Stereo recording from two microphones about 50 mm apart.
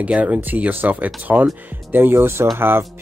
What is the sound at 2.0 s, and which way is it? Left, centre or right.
Speech, right.